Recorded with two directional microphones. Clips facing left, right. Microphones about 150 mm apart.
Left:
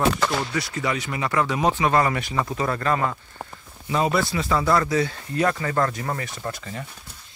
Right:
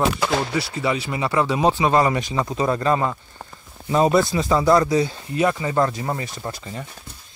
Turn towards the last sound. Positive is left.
turn(degrees=-30)  # may be behind; listen again after turning